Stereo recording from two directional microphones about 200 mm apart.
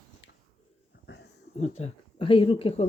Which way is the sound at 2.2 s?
25° left (ahead or behind).